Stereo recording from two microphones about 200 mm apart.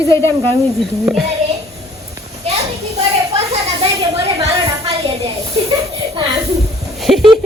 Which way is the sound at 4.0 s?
30° right (ahead or behind).